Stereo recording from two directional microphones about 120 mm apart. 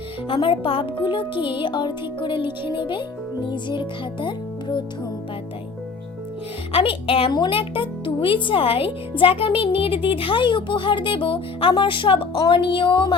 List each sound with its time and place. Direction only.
0.3 s speech: 45° left (ahead or behind)
6.7 s speech: 50° left (ahead or behind)